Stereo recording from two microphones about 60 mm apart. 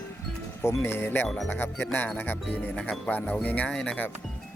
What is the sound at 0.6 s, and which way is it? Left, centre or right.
Speech, left.